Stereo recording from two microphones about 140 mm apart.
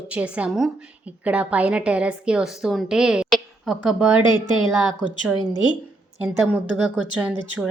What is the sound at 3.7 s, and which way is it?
Speech, 30° left (ahead or behind).